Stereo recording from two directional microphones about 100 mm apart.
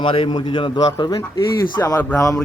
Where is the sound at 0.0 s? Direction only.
60° left (ahead or behind); by 2.4 s 35° left (ahead or behind).